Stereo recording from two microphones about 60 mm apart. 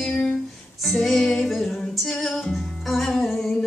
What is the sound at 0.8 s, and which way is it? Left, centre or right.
Music, centre.